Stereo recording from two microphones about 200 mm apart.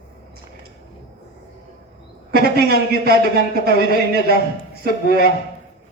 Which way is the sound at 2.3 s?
50° right (ahead or behind).